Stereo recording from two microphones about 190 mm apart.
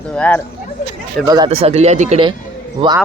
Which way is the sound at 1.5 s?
30° right (ahead or behind).